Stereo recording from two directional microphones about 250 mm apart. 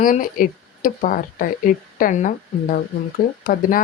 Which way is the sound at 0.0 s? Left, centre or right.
Left.